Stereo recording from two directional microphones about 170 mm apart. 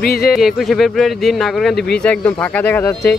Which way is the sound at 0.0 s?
65° left (ahead or behind).